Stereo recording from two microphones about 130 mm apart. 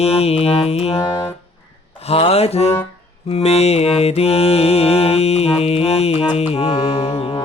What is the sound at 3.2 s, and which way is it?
Mantra, 55° left (ahead or behind).